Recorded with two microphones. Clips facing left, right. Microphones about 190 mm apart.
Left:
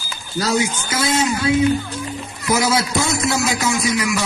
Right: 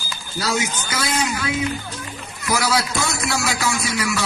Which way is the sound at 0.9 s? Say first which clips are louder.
Left 4 dB; 25° left (ahead or behind).